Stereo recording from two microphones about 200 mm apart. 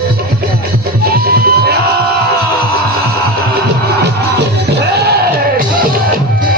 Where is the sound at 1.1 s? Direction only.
50° right (ahead or behind).